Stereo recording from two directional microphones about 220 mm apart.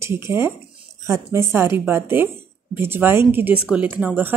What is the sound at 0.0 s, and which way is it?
Speech, 10° right (ahead or behind).